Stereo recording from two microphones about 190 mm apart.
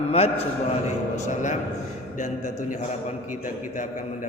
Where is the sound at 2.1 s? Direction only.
45° left (ahead or behind).